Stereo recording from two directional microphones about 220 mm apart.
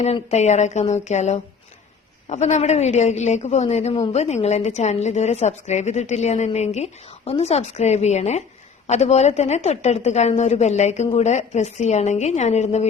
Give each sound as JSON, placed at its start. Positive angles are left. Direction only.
{"t": 0.0, "sound": "a woman's voice", "side_deg": 30}